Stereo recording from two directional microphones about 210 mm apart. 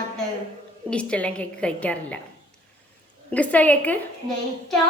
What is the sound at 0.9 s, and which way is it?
A woman's voice, 5° left (ahead or behind).